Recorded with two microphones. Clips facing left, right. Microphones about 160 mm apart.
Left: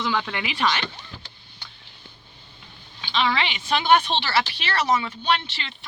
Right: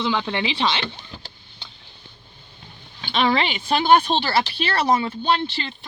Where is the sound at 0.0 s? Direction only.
25° right (ahead or behind).